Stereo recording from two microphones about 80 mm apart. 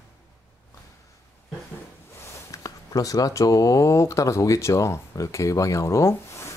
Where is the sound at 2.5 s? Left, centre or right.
Left.